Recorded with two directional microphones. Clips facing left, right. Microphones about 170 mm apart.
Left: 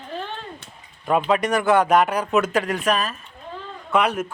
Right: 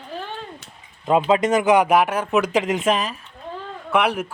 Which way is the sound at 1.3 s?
25° right (ahead or behind).